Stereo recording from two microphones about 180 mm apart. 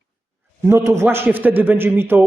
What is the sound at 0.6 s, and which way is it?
Speech, 15° right (ahead or behind).